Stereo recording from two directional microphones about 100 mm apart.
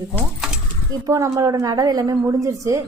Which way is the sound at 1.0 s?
30° right (ahead or behind).